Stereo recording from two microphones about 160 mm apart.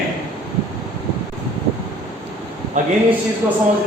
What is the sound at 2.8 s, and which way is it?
Speech, 50° right (ahead or behind).